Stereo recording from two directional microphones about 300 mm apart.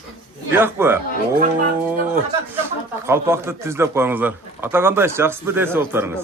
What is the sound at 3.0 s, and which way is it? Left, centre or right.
Speech, centre.